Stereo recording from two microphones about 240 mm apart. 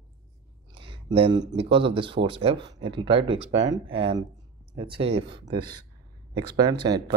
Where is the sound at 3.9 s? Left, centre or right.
Right.